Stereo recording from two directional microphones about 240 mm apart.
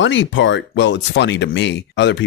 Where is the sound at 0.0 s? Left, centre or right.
Left.